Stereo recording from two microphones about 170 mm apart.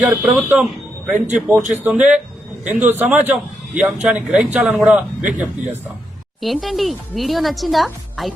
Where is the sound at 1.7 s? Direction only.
5° right (ahead or behind).